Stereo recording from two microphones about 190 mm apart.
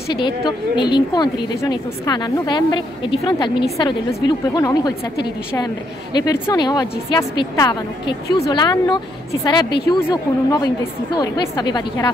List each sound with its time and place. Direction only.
0.7 s a woman's voice: 25° left (ahead or behind)
4.6 s a woman's voice: 20° left (ahead or behind)